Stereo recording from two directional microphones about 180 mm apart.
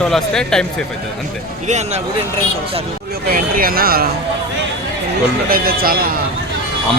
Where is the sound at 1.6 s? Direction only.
40° right (ahead or behind).